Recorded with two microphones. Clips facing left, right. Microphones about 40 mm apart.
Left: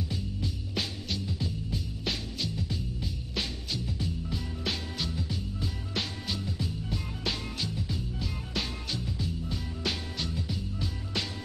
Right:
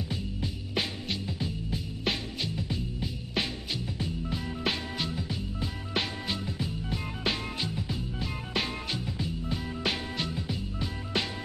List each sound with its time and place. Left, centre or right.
0.1 s music: right